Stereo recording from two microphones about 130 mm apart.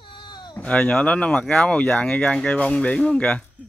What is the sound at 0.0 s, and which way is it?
Cat, 40° left (ahead or behind).